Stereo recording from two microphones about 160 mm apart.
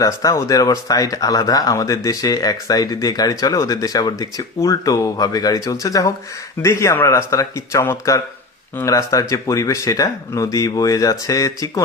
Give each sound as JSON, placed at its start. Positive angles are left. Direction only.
{"t": 0.0, "sound": "speech", "side_deg": 20}